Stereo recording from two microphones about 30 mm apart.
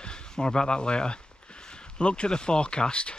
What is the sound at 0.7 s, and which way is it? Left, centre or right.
Speech, left.